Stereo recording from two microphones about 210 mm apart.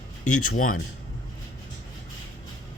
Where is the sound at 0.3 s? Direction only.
90° left.